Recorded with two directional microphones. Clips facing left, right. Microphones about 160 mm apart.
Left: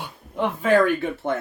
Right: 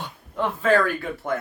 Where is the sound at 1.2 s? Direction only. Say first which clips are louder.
Left 1 dB; 30° left (ahead or behind).